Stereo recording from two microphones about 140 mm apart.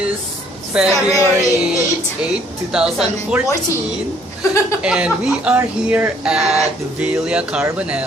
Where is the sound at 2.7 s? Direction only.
5° right (ahead or behind).